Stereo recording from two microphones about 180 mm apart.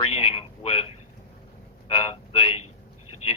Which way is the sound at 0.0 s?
30° left (ahead or behind).